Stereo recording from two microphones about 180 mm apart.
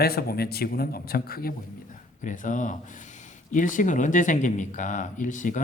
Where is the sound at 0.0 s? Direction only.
60° left (ahead or behind).